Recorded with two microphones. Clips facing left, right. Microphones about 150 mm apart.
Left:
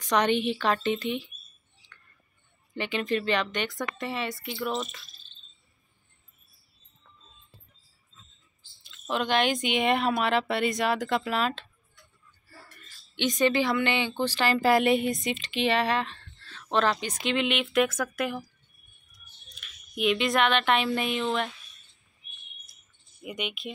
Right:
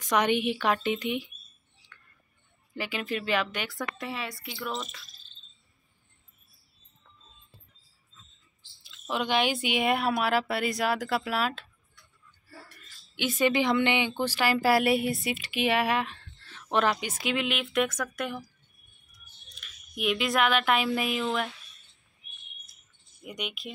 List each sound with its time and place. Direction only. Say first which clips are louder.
0.0 s speech: left 1 dB; 10° right (ahead or behind)
2.7 s speech: left 4 dB; 5° right (ahead or behind)
9.1 s speech: left 1 dB; 10° right (ahead or behind)
13.1 s speech: left 1 dB; 10° right (ahead or behind)
19.5 s speech: left 3 dB; centre (ahead or behind)
23.2 s speech: left 3 dB; centre (ahead or behind)